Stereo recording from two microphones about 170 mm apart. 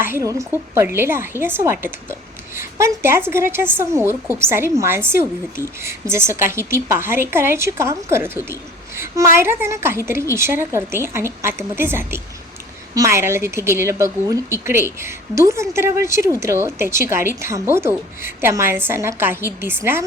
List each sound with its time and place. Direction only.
0.0 s a woman's voice: 15° right (ahead or behind)
9.3 s a woman's voice: 15° right (ahead or behind)